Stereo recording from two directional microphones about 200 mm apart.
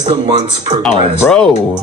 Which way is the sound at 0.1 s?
35° right (ahead or behind).